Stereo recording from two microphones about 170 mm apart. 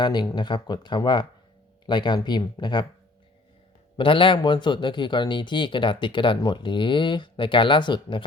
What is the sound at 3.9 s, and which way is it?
Speech, 30° left (ahead or behind).